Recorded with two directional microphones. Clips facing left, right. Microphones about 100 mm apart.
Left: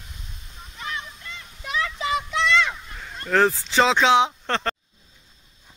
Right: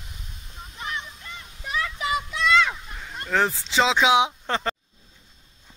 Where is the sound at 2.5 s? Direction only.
10° right (ahead or behind).